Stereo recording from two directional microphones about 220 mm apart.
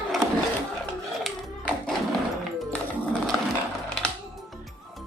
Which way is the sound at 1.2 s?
5° left (ahead or behind).